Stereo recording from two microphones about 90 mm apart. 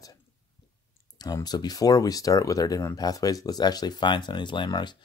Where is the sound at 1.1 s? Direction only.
50° left (ahead or behind).